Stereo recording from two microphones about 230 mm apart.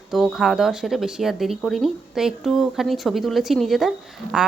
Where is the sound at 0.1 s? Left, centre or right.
Centre.